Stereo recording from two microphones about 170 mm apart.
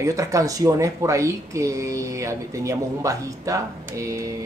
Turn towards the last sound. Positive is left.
turn(degrees=-20)  # may be behind; listen again after turning